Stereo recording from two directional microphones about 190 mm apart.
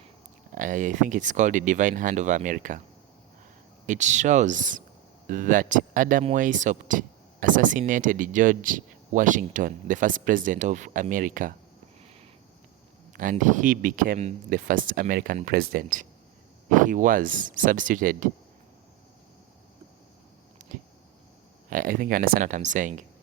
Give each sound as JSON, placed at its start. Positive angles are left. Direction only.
{"t": 0.5, "sound": "speech", "side_deg": -40}
{"t": 3.8, "sound": "speech", "side_deg": -40}
{"t": 13.3, "sound": "speech", "side_deg": -40}
{"t": 21.7, "sound": "speech", "side_deg": -45}